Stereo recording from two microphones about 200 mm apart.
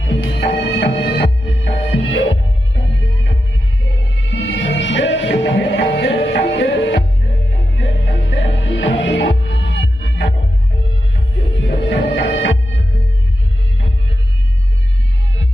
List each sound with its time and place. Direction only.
0.0 s music: 60° left (ahead or behind)
11.5 s music: 65° left (ahead or behind)